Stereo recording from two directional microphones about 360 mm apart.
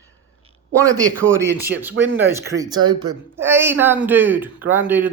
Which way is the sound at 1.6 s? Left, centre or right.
Centre.